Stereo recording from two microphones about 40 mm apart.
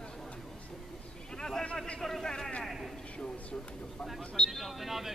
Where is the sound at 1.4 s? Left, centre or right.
Centre.